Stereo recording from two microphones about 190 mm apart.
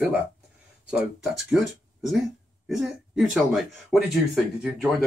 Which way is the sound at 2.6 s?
Centre (ahead or behind).